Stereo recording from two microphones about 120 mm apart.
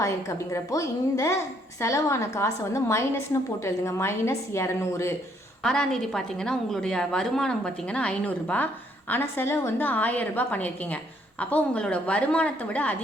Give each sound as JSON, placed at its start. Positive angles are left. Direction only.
{"t": 0.3, "sound": "a woman's voice", "side_deg": 25}
{"t": 5.6, "sound": "a woman's voice", "side_deg": 5}